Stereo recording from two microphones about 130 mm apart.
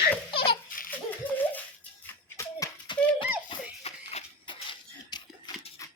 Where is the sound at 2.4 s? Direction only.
25° left (ahead or behind).